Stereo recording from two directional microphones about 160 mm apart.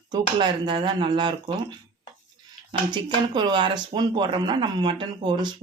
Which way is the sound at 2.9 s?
30° right (ahead or behind).